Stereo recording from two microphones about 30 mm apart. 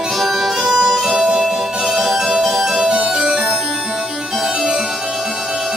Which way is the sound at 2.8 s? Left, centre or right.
Centre.